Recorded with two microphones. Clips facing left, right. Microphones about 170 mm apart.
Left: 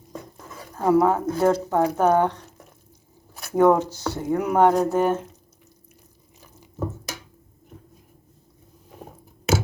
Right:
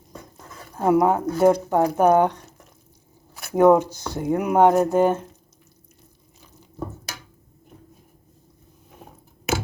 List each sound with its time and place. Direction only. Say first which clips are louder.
0.8 s speech: even; 15° right (ahead or behind)
3.5 s speech: right 2 dB; 10° right (ahead or behind)